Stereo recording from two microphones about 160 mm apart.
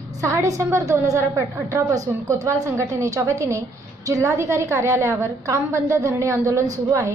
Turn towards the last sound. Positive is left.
turn(degrees=-20)  # may be behind; listen again after turning